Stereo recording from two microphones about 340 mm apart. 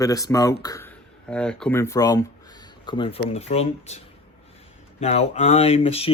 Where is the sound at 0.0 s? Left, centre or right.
Centre.